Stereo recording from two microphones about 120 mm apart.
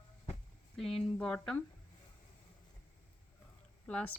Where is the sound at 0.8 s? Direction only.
5° left (ahead or behind).